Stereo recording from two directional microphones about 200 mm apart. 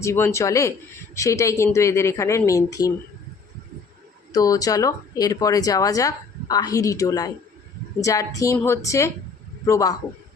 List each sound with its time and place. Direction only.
0.0 s speech: 15° left (ahead or behind)
4.3 s speech: 20° left (ahead or behind)